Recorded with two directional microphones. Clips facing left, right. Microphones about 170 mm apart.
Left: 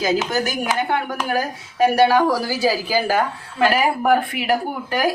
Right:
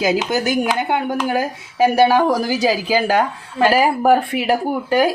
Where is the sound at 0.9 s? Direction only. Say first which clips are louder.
Right 3 dB; 20° right (ahead or behind).